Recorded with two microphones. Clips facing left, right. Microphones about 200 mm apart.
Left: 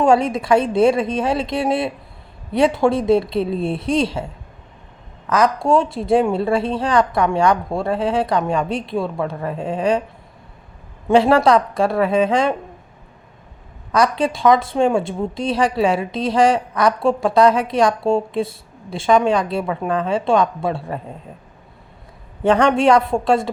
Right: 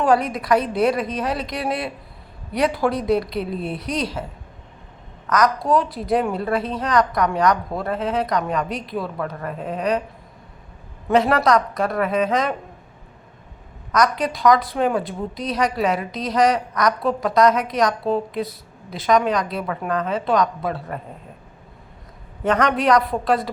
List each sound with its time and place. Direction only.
0.0 s a woman's voice: 25° left (ahead or behind)
5.3 s a woman's voice: 25° left (ahead or behind)
11.1 s a woman's voice: 30° left (ahead or behind)
13.9 s a woman's voice: 30° left (ahead or behind)
22.4 s a woman's voice: 30° left (ahead or behind)